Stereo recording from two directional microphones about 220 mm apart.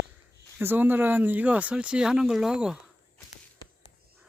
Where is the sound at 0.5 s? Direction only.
10° right (ahead or behind).